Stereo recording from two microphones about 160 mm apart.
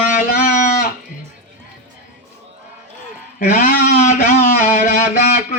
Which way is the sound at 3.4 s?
55° left (ahead or behind).